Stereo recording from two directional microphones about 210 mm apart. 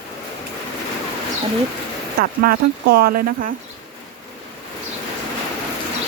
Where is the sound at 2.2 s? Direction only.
45° right (ahead or behind).